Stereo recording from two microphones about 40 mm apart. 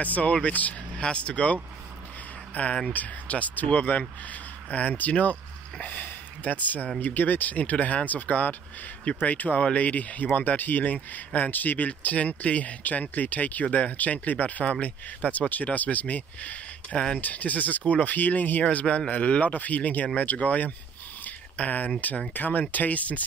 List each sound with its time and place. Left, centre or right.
0.0 s speech: left
0.9 s speech: left
3.9 s speech: left
4.3 s a sound: left
5.9 s speech: left
14.6 s speech: left
16.9 s speech: left
17.2 s speech: left
18.7 s speech: left